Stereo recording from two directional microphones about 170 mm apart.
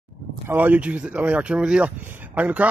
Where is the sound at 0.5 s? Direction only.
10° right (ahead or behind).